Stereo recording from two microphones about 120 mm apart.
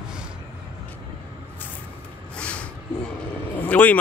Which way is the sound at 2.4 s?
10° left (ahead or behind).